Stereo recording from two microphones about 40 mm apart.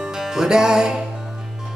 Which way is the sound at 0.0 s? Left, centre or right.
Centre.